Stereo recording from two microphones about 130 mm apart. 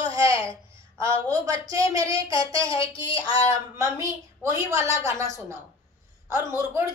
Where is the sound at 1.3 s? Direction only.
30° right (ahead or behind).